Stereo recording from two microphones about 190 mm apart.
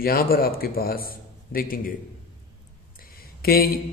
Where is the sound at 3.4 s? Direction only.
55° left (ahead or behind).